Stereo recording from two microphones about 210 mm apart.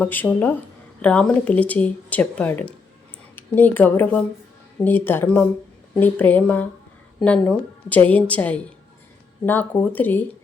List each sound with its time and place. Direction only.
0.0 s speech: 10° left (ahead or behind)